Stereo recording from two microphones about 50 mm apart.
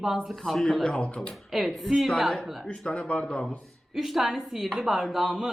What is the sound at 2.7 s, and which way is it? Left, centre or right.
Speech, centre.